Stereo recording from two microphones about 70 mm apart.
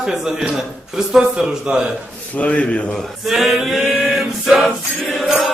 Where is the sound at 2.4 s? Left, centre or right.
Centre.